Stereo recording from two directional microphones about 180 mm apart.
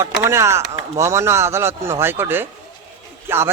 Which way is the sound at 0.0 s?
15° right (ahead or behind).